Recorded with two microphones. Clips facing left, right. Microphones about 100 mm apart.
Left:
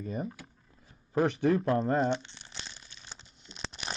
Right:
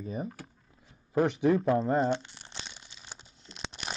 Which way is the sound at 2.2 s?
45° right (ahead or behind).